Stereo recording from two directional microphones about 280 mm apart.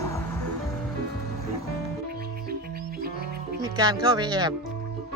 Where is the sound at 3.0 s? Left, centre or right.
Right.